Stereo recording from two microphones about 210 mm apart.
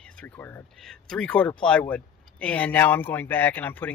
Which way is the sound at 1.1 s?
5° left (ahead or behind).